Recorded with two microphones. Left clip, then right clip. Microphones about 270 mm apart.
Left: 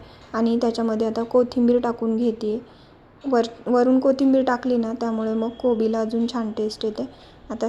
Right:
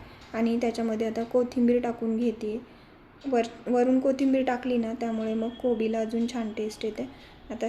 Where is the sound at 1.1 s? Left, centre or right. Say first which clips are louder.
Left 7 dB; centre.